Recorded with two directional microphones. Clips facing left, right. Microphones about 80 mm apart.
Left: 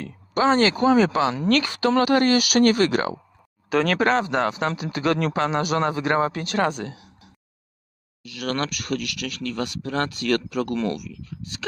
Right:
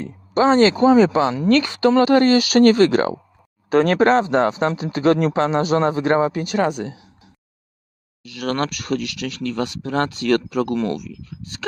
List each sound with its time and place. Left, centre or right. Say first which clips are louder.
0.0 s speech: right 4 dB; right
6.2 s speech: right 3 dB; centre
6.8 s a sound: right 3 dB; right
8.2 s speech: right 4 dB; right